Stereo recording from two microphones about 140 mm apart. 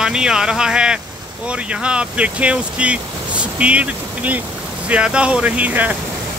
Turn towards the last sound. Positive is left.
turn(degrees=-10)  # may be behind; listen again after turning